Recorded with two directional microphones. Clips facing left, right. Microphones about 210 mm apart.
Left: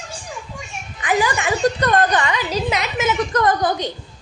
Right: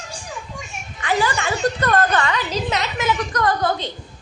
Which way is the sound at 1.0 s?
15° left (ahead or behind).